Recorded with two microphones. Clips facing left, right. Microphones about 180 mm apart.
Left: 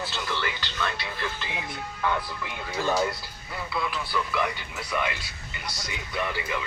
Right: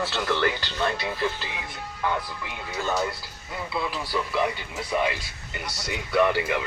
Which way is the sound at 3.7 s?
30° right (ahead or behind).